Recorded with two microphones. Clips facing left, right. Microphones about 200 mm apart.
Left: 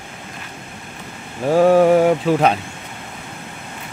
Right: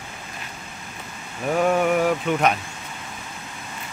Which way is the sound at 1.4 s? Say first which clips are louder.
Left 8 dB; 30° left (ahead or behind).